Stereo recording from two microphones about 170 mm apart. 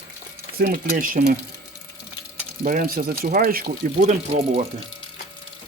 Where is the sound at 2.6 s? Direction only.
55° right (ahead or behind).